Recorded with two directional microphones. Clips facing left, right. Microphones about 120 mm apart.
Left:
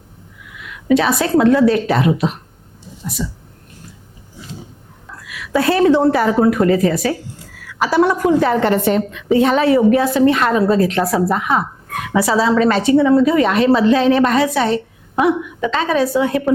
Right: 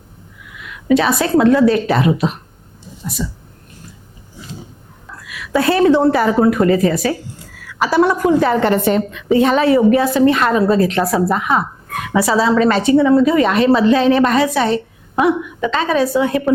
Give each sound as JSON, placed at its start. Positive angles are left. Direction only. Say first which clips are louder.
{"t": 0.6, "sound": "a woman's voice", "louder": "even", "side_deg": -20}
{"t": 5.0, "sound": "a woman's voice", "louder": "even", "side_deg": -25}